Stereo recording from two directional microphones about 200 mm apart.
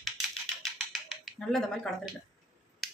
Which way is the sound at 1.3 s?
Centre (ahead or behind).